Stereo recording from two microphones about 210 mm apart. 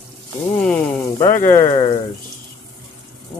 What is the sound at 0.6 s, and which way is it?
Speech, 5° left (ahead or behind).